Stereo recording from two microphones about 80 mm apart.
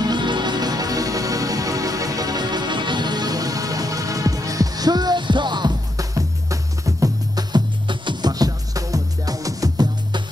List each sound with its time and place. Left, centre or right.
0.0 s music: right
5.9 s music: right
7.5 s music: right